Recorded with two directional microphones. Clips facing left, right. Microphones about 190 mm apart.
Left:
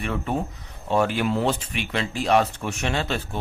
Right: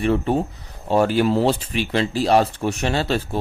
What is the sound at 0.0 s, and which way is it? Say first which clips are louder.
A man's voice: right 7 dB; 30° right (ahead or behind).